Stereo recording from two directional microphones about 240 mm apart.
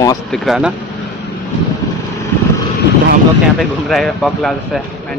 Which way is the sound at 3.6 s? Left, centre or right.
Centre.